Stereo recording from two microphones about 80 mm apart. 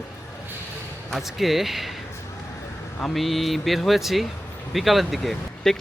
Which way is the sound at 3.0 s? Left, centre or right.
Centre.